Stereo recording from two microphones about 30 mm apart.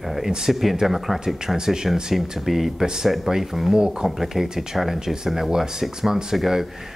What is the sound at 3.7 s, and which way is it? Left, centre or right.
Speech, right.